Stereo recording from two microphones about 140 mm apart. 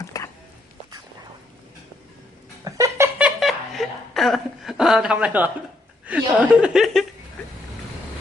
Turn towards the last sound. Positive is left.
turn(degrees=0)  # may be behind; listen again after turning